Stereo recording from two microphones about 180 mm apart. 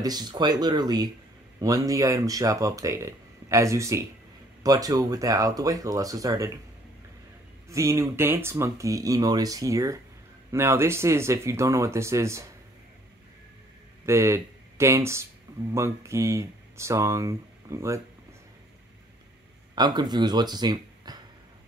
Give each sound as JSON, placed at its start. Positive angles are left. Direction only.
{"t": 0.0, "sound": "speech", "side_deg": -20}
{"t": 7.7, "sound": "speech", "side_deg": -15}
{"t": 14.0, "sound": "speech", "side_deg": -15}
{"t": 19.7, "sound": "speech", "side_deg": -25}